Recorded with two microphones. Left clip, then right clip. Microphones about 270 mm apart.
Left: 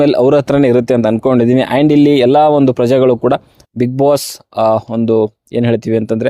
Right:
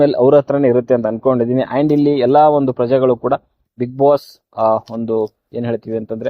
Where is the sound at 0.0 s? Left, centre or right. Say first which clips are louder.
Left 1 dB; left.